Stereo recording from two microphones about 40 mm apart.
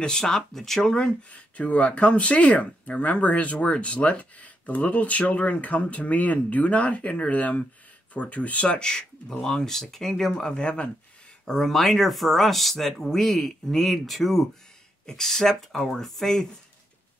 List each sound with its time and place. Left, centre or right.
0.0 s speech: centre
1.3 s speech: left
11.4 s speech: centre